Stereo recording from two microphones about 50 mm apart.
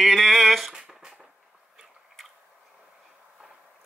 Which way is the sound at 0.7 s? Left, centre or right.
Centre.